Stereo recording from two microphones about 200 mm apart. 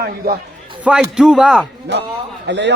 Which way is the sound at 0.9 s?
5° right (ahead or behind).